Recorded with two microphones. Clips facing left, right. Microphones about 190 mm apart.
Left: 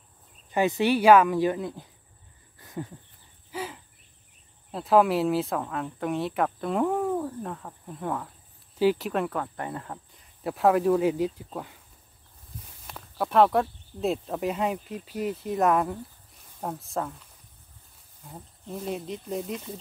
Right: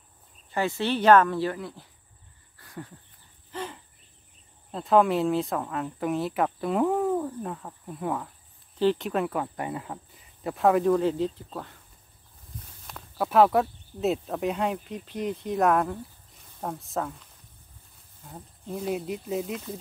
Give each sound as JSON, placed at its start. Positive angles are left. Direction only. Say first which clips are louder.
{"t": 0.5, "sound": "speech", "louder": "left 4 dB", "side_deg": 15}
{"t": 2.6, "sound": "dog", "louder": "left 5 dB", "side_deg": 20}
{"t": 3.5, "sound": "a sound", "louder": "left 1 dB", "side_deg": 5}
{"t": 4.6, "sound": "speech", "louder": "even", "side_deg": 5}
{"t": 12.8, "sound": "speech", "louder": "right 1 dB", "side_deg": 0}